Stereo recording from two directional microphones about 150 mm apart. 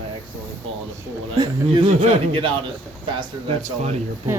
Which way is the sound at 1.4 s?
35° right (ahead or behind).